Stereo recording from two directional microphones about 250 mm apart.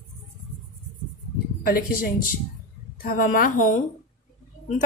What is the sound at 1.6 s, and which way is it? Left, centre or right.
Speech, left.